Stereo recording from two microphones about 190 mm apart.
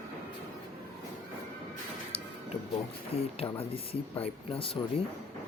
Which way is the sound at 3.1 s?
30° left (ahead or behind).